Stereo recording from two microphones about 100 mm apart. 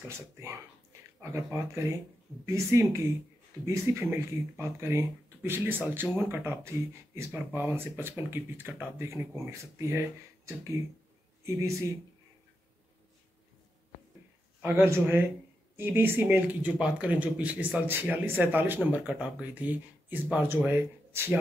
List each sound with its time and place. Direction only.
1.3 s speech: 25° right (ahead or behind)
14.6 s speech: 25° right (ahead or behind)